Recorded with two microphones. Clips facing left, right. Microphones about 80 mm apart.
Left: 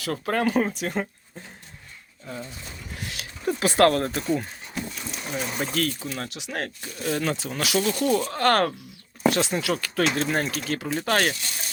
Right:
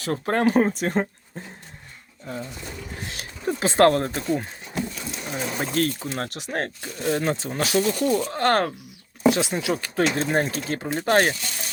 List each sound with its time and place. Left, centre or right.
0.0 s speech: right
3.4 s speech: right
5.3 s speech: right